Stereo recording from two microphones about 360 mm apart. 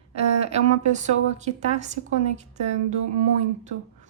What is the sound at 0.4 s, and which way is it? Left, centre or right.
Speech, centre.